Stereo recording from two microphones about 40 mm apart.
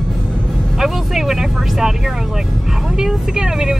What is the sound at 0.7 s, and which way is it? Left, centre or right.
Vehicle, centre.